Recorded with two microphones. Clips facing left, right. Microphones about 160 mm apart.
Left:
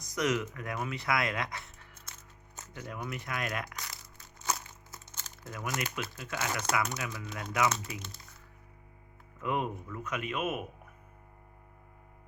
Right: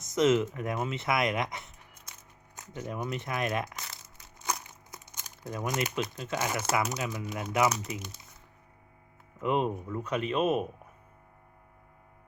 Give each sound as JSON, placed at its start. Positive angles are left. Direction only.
{"t": 0.0, "sound": "speech", "side_deg": -25}
{"t": 4.4, "sound": "crumpling", "side_deg": -15}
{"t": 6.8, "sound": "speech", "side_deg": -15}
{"t": 9.4, "sound": "speech", "side_deg": -25}